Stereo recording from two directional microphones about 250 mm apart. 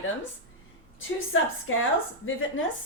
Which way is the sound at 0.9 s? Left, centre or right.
Left.